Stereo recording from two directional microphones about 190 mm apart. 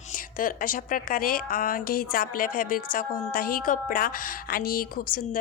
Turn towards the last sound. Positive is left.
turn(degrees=50)  # may be behind; listen again after turning